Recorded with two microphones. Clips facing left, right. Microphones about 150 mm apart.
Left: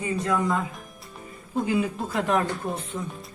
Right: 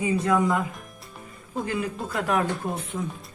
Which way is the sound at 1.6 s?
5° left (ahead or behind).